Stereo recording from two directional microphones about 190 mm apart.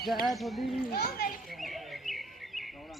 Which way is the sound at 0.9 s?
55° left (ahead or behind).